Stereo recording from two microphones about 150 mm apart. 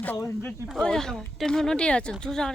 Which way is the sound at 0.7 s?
Centre (ahead or behind).